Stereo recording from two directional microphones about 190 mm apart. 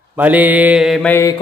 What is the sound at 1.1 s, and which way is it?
Mantra, 15° left (ahead or behind).